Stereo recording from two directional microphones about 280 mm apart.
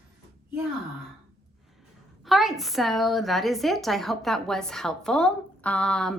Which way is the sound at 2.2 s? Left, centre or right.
Centre.